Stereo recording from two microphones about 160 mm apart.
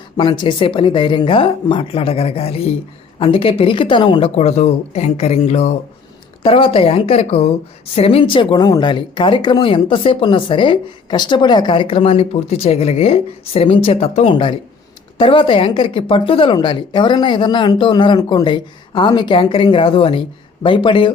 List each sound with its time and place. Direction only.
0.2 s speech: 30° left (ahead or behind)
4.4 s speech: 40° left (ahead or behind)